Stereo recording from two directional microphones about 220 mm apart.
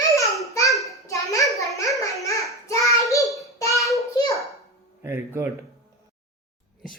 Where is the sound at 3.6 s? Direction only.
15° left (ahead or behind).